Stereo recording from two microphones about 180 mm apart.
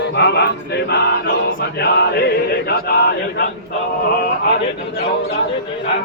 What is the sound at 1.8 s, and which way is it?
Chant, 65° left (ahead or behind).